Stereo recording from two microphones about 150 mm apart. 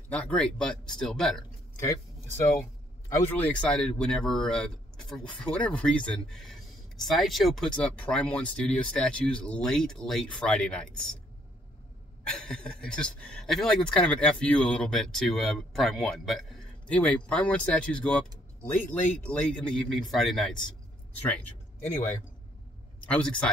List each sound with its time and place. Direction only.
0.1 s speech: 10° left (ahead or behind)
3.2 s speech: 10° left (ahead or behind)
12.3 s speech: 5° left (ahead or behind)
23.0 s speech: 10° left (ahead or behind)